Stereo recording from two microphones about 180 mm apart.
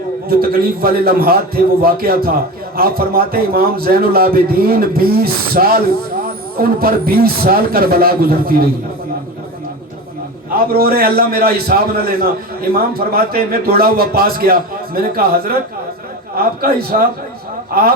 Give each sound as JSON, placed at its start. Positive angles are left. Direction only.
{"t": 0.3, "sound": "a man's voice", "side_deg": -55}
{"t": 10.7, "sound": "a man's voice", "side_deg": -55}
{"t": 16.3, "sound": "a man's voice", "side_deg": -55}